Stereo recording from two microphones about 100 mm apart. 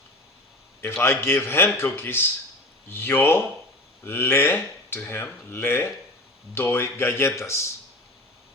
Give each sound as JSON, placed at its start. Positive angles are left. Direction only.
{"t": 1.0, "sound": "speech", "side_deg": 25}